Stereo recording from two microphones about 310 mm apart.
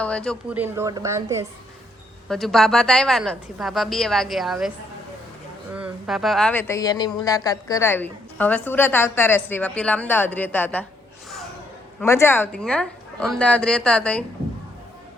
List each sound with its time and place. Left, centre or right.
0.0 s a woman's voice: centre
5.7 s speech: centre
11.9 s a woman's voice: centre